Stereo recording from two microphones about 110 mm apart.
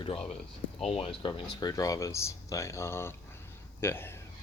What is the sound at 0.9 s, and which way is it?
Speech, 60° left (ahead or behind).